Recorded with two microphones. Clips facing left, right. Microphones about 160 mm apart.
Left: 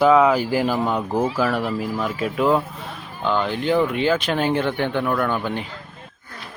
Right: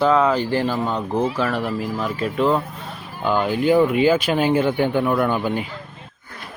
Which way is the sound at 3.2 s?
10° right (ahead or behind).